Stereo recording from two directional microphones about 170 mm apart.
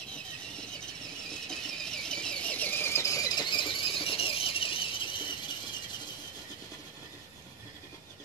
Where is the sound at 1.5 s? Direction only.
5° left (ahead or behind); by 5.0 s 30° left (ahead or behind).